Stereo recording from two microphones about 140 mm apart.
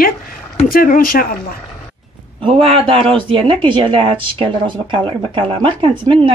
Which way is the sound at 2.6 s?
40° right (ahead or behind).